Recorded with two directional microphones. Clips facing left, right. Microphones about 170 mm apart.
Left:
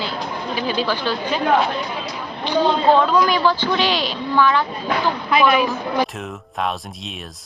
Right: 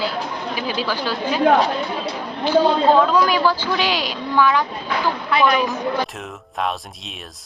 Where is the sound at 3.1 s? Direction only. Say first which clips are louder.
Even; 10° right (ahead or behind).